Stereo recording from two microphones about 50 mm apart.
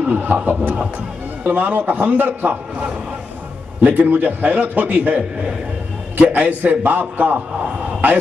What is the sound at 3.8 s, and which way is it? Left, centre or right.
A man's voice, right.